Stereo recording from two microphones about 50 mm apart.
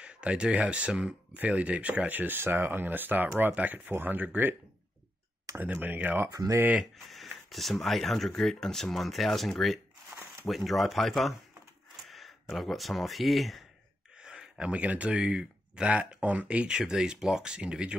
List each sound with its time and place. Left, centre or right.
0.0 s speech: right
5.8 s speech: right
7.1 s speech: centre
14.1 s a sound: centre
14.6 s speech: right
16.0 s speech: right